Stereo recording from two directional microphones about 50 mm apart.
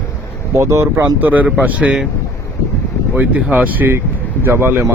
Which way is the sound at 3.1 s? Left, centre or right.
Right.